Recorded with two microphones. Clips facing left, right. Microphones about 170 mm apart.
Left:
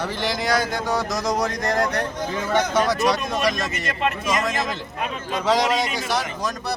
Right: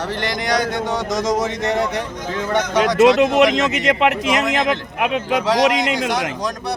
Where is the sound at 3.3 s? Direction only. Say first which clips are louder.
Right 8 dB; 80° right.